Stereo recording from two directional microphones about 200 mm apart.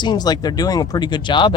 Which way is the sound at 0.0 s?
20° left (ahead or behind).